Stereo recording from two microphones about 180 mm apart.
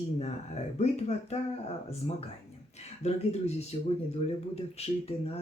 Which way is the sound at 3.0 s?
35° left (ahead or behind).